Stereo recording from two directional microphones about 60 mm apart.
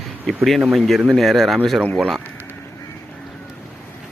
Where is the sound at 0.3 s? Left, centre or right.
Centre.